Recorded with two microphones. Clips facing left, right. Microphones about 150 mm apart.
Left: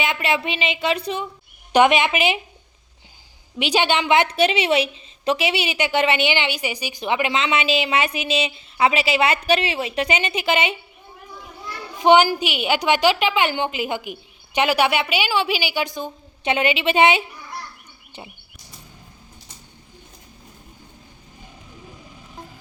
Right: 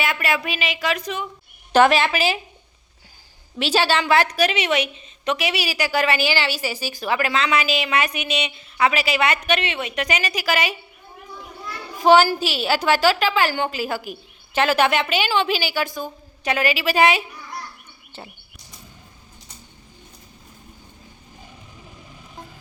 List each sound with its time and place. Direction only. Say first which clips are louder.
0.0 s a woman's voice: left 1 dB; 20° left (ahead or behind)
1.7 s a woman's voice: even; 15° left (ahead or behind)
3.6 s a woman's voice: even; 15° left (ahead or behind)
11.9 s a woman's voice: even; 20° left (ahead or behind)
18.1 s a sound: even; 15° left (ahead or behind)